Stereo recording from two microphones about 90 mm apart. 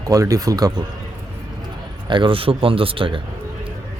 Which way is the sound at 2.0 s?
70° right (ahead or behind).